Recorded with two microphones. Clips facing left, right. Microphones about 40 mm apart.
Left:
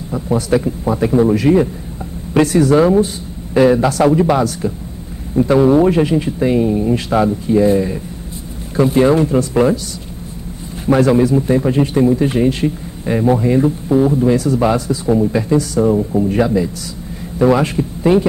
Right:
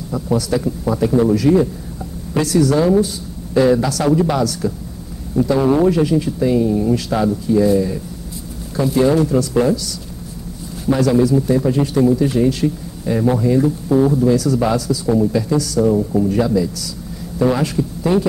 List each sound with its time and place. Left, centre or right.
0.1 s speech: left
16.0 s speech: centre
16.3 s speech: left